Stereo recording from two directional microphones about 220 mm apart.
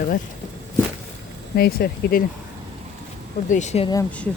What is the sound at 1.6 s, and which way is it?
Speech, 45° left (ahead or behind).